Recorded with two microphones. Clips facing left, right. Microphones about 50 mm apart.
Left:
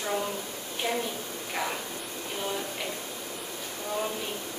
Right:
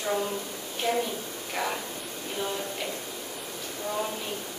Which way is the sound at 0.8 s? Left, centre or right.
Centre.